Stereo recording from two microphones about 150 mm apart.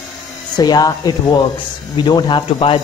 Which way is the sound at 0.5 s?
25° left (ahead or behind).